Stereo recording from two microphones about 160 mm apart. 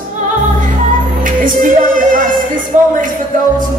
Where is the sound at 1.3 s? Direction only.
55° right (ahead or behind).